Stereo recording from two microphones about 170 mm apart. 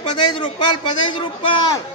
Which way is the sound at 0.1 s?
25° left (ahead or behind).